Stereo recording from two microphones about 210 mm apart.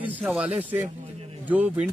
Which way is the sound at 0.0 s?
10° right (ahead or behind).